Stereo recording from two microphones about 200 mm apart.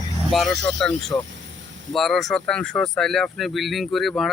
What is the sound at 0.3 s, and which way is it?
Speech, centre (ahead or behind).